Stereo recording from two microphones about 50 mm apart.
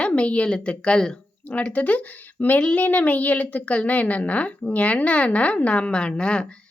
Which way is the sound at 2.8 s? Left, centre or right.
Left.